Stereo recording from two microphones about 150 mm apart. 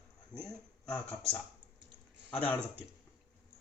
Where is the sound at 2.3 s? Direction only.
10° left (ahead or behind).